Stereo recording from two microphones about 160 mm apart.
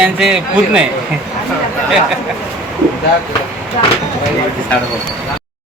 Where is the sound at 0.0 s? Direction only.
5° right (ahead or behind).